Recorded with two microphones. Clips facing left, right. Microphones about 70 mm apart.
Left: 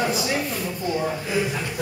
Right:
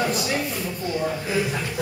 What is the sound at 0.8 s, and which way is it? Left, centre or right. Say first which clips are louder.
Speech: left 1 dB; centre.